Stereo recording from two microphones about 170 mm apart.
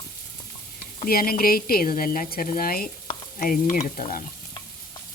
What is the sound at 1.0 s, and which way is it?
Speech, 60° left (ahead or behind).